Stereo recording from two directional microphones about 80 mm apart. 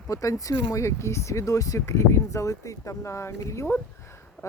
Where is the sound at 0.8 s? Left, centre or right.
Left.